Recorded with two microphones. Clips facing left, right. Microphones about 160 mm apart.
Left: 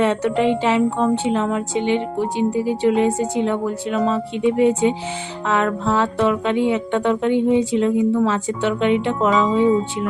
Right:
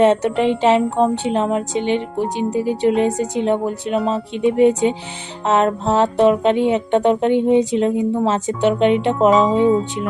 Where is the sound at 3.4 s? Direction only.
20° right (ahead or behind).